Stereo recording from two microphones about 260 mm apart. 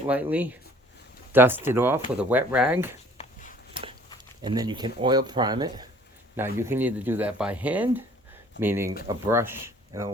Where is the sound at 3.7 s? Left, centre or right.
Centre.